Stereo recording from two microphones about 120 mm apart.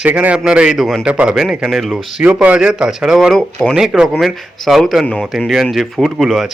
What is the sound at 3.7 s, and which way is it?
A man's voice, 5° right (ahead or behind).